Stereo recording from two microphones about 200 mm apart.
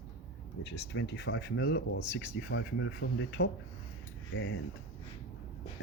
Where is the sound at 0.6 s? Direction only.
60° left (ahead or behind).